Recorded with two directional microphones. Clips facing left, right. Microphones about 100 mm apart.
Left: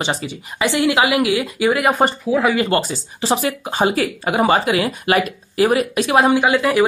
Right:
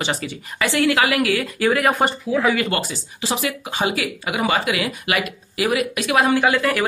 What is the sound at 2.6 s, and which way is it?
Speech, 30° left (ahead or behind).